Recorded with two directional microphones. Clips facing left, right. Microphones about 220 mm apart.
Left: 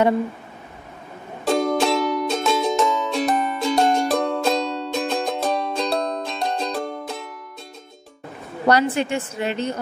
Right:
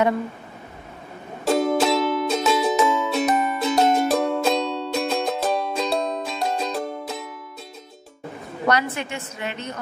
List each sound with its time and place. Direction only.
1.4 s music: centre (ahead or behind)
8.6 s a woman's voice: 30° left (ahead or behind)